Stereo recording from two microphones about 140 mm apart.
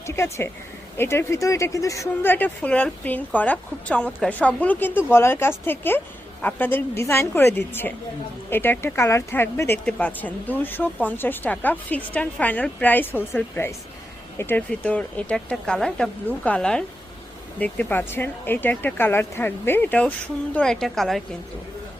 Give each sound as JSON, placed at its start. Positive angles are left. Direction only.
{"t": 0.0, "sound": "speech", "side_deg": 20}